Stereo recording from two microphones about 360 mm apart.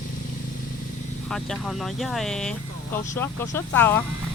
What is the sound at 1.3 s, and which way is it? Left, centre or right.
Speech, centre.